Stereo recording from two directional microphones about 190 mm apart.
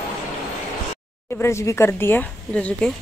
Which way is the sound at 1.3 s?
15° left (ahead or behind).